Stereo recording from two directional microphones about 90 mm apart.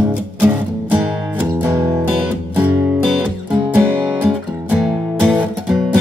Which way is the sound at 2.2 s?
15° right (ahead or behind).